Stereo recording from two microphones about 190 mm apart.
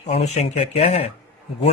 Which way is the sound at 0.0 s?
35° left (ahead or behind).